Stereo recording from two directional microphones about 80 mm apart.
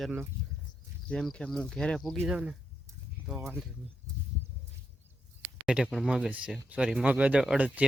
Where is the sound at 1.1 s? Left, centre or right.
Centre.